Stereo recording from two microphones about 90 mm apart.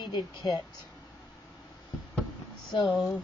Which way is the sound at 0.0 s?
55° left (ahead or behind).